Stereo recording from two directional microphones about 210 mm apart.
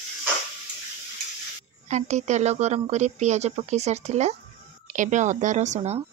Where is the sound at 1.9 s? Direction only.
35° right (ahead or behind).